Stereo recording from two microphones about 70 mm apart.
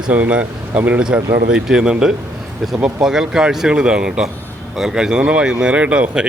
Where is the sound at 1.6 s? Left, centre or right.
Centre.